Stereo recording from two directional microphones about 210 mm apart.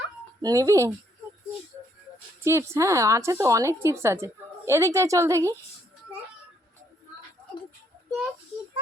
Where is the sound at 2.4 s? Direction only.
15° right (ahead or behind).